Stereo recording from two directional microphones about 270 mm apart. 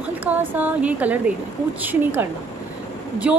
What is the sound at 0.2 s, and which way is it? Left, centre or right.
A woman's voice, centre.